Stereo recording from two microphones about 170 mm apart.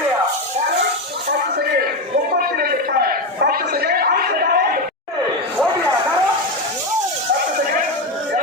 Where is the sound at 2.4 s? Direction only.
60° right (ahead or behind).